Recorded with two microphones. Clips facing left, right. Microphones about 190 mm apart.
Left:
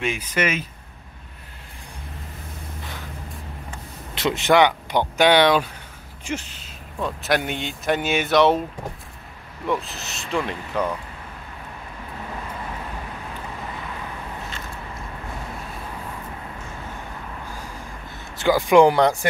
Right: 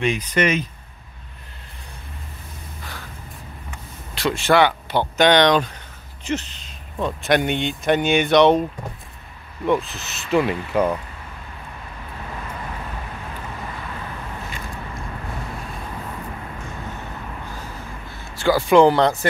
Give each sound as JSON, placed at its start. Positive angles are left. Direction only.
{"t": 0.0, "sound": "speech", "side_deg": 5}
{"t": 4.1, "sound": "speech", "side_deg": 20}
{"t": 9.7, "sound": "speech", "side_deg": 0}
{"t": 18.3, "sound": "speech", "side_deg": 15}